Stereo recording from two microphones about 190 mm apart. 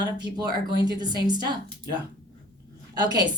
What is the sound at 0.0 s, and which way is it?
A woman's voice, 20° right (ahead or behind).